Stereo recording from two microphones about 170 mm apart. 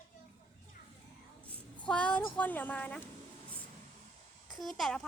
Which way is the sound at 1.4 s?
5° left (ahead or behind).